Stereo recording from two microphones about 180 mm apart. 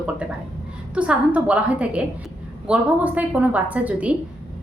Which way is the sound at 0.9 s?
5° right (ahead or behind).